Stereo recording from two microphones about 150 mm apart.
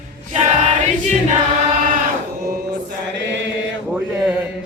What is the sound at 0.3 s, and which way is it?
Choir, 45° right (ahead or behind).